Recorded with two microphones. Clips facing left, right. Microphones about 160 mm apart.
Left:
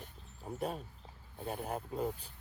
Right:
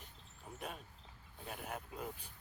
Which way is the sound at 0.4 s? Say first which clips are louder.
Left 9 dB; 35° left (ahead or behind).